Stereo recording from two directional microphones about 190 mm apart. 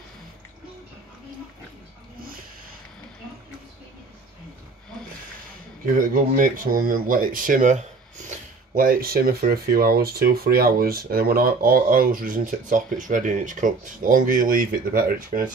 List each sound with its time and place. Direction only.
5.9 s speech: 45° right (ahead or behind)